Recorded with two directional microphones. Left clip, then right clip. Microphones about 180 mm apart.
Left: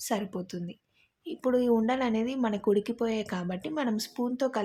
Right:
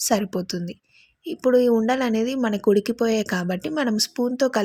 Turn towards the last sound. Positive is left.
turn(degrees=-25)  # may be behind; listen again after turning